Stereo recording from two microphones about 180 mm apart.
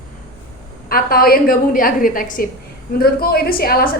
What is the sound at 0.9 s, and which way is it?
A woman's voice, 55° left (ahead or behind).